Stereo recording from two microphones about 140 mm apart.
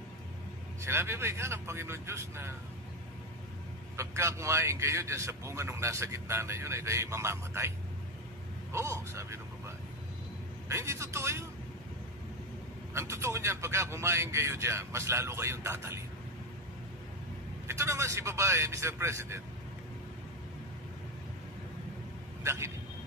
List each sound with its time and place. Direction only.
0.8 s a man's voice: 20° right (ahead or behind)
3.9 s a man's voice: 20° right (ahead or behind)
8.7 s a man's voice: 20° right (ahead or behind)
10.7 s a man's voice: 20° right (ahead or behind)
12.9 s a man's voice: 20° right (ahead or behind)
17.6 s a man's voice: 20° right (ahead or behind)
22.4 s speech: 20° right (ahead or behind)